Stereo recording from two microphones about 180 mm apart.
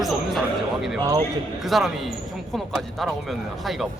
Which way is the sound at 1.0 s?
20° right (ahead or behind).